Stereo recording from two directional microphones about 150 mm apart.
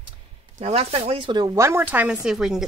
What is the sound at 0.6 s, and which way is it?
Speech, 40° right (ahead or behind).